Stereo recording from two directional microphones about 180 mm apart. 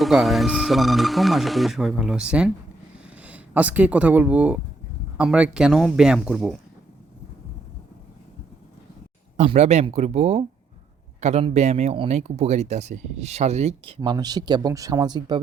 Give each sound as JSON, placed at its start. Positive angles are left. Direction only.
{"t": 0.0, "sound": "speech", "side_deg": 0}
{"t": 9.4, "sound": "speech", "side_deg": -40}